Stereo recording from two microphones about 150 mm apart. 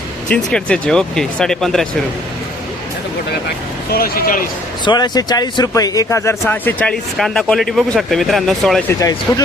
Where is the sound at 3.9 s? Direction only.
85° left.